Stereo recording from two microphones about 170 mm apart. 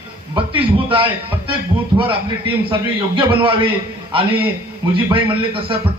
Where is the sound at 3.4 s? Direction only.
30° right (ahead or behind).